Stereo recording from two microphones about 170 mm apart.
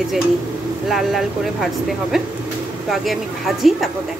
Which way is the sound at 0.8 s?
Centre (ahead or behind).